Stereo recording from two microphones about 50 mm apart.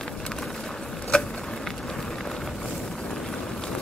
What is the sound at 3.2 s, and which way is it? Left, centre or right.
Vehicle, centre.